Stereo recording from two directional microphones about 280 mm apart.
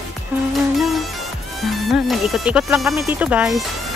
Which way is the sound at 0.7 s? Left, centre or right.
Centre.